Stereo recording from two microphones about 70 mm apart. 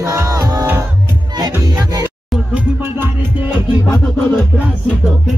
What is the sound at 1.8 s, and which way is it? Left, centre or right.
Music, right.